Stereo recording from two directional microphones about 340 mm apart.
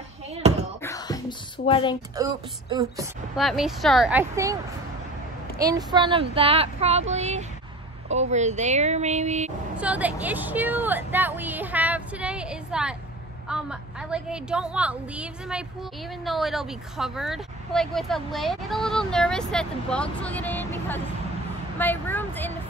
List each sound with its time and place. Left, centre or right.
0.8 s music: centre
1.7 s speech: centre
2.1 s speech: centre
5.6 s speech: centre
9.8 s speech: centre
21.7 s vehicle: centre